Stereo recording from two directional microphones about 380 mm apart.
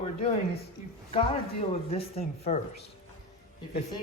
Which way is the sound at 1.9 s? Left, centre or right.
Centre.